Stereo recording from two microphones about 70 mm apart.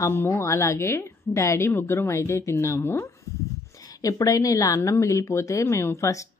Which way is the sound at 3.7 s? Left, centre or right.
Left.